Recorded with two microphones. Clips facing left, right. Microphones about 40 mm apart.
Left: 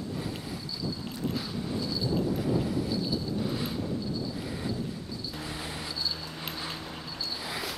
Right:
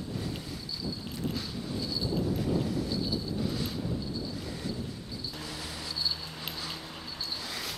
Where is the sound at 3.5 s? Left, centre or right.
Centre.